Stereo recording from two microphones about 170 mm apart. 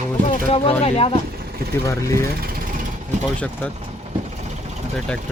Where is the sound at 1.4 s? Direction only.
70° right (ahead or behind).